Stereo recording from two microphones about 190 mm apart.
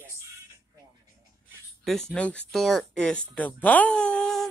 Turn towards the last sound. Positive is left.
turn(degrees=5)  # may be behind; listen again after turning